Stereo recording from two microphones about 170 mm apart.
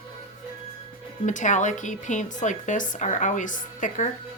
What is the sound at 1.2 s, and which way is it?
A woman's voice, 45° left (ahead or behind).